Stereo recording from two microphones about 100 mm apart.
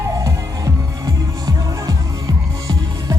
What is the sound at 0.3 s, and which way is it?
Music, 35° right (ahead or behind).